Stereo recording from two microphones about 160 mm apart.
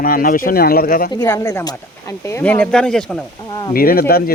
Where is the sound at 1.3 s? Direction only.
20° left (ahead or behind).